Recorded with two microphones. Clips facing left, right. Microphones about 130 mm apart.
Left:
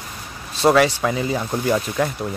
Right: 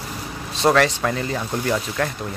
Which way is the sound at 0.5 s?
5° left (ahead or behind).